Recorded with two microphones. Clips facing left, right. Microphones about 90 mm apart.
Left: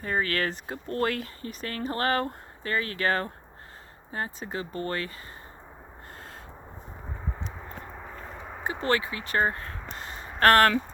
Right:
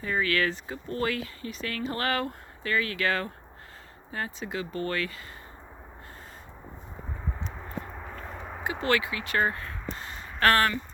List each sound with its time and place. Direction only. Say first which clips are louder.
0.0 s speech: right 1 dB; 40° left (ahead or behind)
7.4 s a sound: right 2 dB; 5° left (ahead or behind)
8.8 s speech: even; 35° left (ahead or behind)
10.4 s speech: left 4 dB; 45° left (ahead or behind)